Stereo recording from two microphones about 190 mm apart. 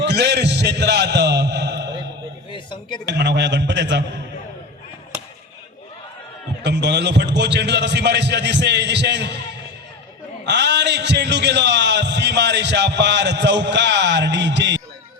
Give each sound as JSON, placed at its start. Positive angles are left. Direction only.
{"t": 0.0, "sound": "a sound", "side_deg": -65}
{"t": 2.5, "sound": "speech", "side_deg": 25}
{"t": 3.1, "sound": "a man's voice", "side_deg": -65}
{"t": 6.6, "sound": "a man's voice", "side_deg": -65}
{"t": 10.4, "sound": "a man's voice", "side_deg": -65}